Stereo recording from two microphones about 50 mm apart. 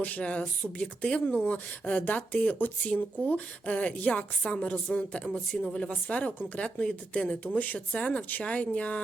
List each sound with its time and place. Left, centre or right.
0.0 s a woman's voice: left
1.5 s a woman's voice: left